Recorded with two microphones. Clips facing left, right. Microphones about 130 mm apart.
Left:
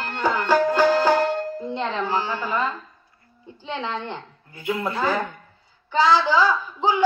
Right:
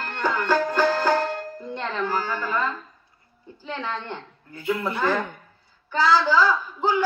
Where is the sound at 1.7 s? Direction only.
15° left (ahead or behind).